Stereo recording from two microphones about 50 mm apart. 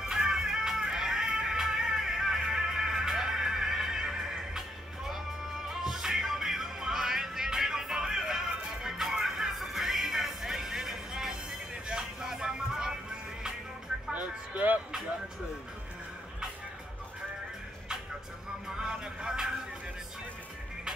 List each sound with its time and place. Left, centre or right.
0.0 s music: centre
14.1 s music: right
14.9 s music: centre
18.8 s music: centre